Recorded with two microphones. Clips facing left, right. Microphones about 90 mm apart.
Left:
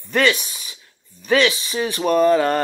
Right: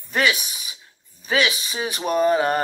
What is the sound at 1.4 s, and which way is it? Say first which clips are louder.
Speech: left 4 dB; 20° right (ahead or behind).